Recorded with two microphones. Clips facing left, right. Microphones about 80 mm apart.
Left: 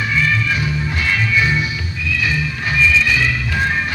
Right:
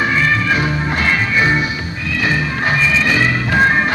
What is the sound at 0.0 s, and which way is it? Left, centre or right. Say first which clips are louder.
Music: right 3 dB; right.